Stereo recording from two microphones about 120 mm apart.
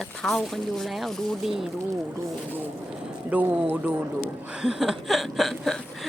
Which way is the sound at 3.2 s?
15° right (ahead or behind).